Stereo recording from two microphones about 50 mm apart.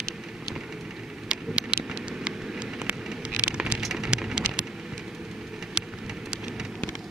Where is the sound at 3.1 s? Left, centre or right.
Centre.